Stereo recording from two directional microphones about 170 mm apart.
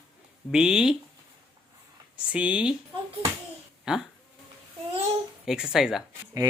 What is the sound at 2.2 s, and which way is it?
Speech, 5° right (ahead or behind).